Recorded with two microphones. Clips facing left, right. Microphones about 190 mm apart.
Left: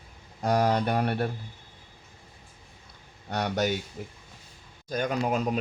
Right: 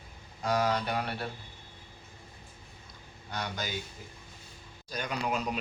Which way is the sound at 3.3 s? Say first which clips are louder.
Left 9 dB; 65° left (ahead or behind).